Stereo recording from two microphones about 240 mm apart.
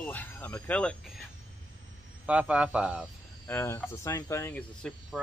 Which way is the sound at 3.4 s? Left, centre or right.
Centre.